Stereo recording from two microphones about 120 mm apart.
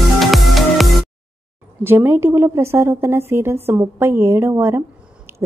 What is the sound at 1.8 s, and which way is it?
A woman's voice, 20° right (ahead or behind).